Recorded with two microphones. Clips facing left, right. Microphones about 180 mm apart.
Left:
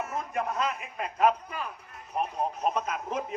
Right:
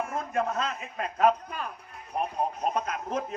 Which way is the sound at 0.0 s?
5° left (ahead or behind).